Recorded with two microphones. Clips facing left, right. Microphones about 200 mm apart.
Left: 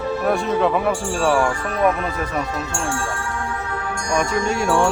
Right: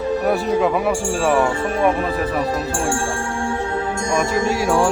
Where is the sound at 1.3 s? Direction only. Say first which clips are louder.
Right 2 dB; 20° right (ahead or behind).